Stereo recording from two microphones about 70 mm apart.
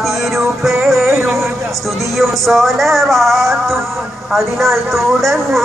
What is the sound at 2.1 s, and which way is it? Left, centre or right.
Speech, centre.